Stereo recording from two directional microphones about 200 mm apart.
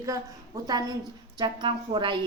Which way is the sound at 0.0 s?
15° right (ahead or behind).